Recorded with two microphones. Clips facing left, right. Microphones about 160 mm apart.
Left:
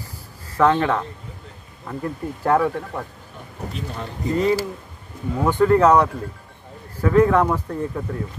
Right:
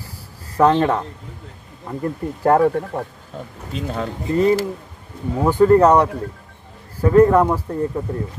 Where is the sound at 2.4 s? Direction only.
45° right (ahead or behind).